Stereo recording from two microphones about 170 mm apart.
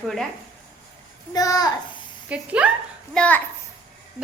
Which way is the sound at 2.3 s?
5° right (ahead or behind).